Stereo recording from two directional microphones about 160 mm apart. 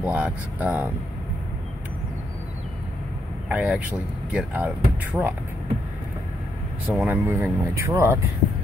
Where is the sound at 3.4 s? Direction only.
10° right (ahead or behind).